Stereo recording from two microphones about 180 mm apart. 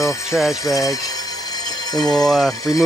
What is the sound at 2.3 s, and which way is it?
Speech, centre (ahead or behind).